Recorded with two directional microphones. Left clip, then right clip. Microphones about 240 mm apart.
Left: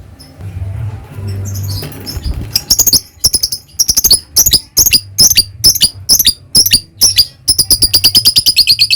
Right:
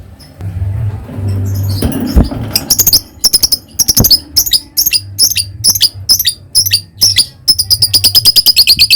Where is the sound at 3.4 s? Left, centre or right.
Centre.